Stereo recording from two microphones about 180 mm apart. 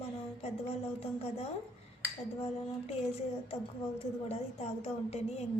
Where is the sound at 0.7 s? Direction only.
35° left (ahead or behind).